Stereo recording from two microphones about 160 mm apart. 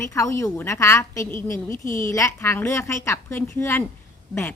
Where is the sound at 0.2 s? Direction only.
20° left (ahead or behind).